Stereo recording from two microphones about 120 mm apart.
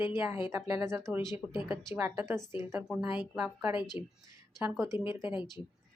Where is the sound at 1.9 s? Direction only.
20° right (ahead or behind).